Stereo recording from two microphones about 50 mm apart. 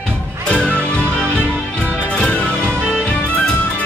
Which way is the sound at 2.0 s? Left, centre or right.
Left.